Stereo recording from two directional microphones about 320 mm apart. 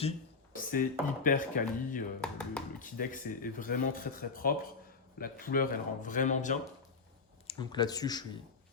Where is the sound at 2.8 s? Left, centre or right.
Left.